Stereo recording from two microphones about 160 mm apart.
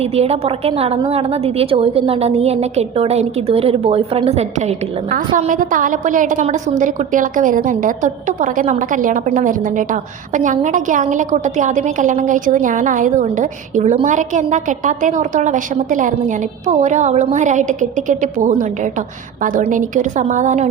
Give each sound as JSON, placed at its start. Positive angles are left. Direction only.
{"t": 0.0, "sound": "a woman's voice", "side_deg": -40}
{"t": 5.4, "sound": "a woman's voice", "side_deg": -55}